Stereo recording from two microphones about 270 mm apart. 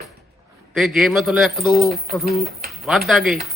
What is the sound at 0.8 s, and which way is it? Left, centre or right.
A man's voice, centre.